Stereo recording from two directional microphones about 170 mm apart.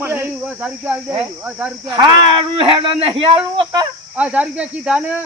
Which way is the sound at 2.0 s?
30° right (ahead or behind).